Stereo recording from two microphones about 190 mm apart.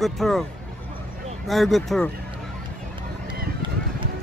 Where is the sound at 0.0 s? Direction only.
Centre (ahead or behind).